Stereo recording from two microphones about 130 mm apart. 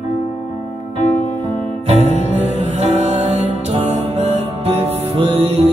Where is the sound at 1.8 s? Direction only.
55° right (ahead or behind).